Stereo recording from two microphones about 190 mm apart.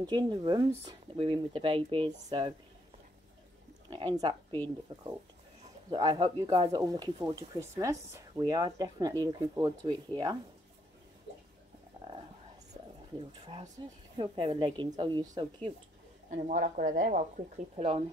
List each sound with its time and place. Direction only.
0.0 s speech: 20° right (ahead or behind)
3.9 s speech: 20° right (ahead or behind)
5.9 s speech: 20° right (ahead or behind)
13.8 s speech: 25° right (ahead or behind)
16.3 s speech: 45° right (ahead or behind)
17.7 s speech: 30° right (ahead or behind)